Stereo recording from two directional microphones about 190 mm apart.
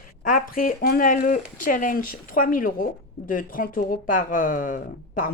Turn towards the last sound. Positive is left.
turn(degrees=45)  # may be behind; listen again after turning